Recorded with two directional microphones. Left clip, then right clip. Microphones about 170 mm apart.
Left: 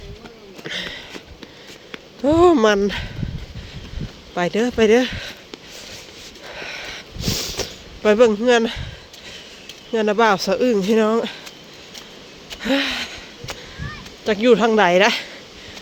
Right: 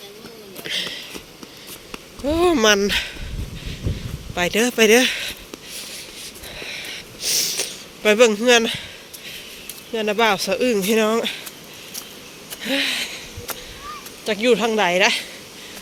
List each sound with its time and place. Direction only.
0.6 s a sound: 50° left (ahead or behind)
2.2 s speech: 40° left (ahead or behind); by 3.1 s 25° left (ahead or behind)
4.4 s speech: 30° left (ahead or behind)
6.5 s sniff: 50° left (ahead or behind)
8.0 s speech: 30° left (ahead or behind)
9.9 s speech: 45° left (ahead or behind)
12.6 s a sound: 50° left (ahead or behind)
14.3 s speech: 50° left (ahead or behind)